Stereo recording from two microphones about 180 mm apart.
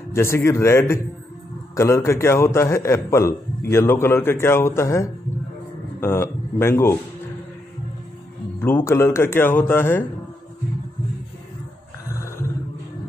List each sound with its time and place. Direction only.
0.1 s a man's voice: 15° left (ahead or behind)
8.5 s a man's voice: 10° left (ahead or behind)